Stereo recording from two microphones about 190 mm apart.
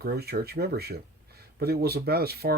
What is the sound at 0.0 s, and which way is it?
Speech, 55° right (ahead or behind).